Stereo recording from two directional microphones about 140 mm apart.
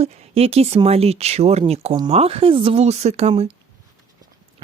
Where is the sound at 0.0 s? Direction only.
45° right (ahead or behind).